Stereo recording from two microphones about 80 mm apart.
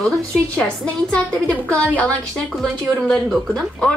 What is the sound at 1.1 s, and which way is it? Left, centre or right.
A woman's voice, centre.